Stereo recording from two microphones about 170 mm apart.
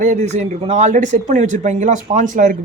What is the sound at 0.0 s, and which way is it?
A woman's voice, 45° right (ahead or behind).